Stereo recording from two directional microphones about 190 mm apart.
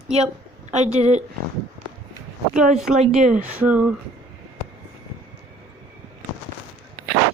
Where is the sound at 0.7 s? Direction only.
35° right (ahead or behind).